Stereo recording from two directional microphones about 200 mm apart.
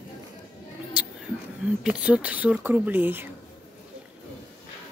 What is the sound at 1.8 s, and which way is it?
Speech, 5° right (ahead or behind).